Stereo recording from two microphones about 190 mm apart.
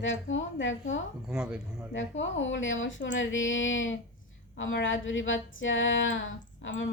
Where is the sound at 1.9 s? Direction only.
80° left.